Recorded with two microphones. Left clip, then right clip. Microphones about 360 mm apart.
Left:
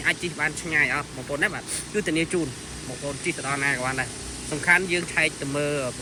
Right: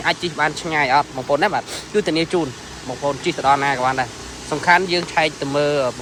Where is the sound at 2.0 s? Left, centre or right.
Centre.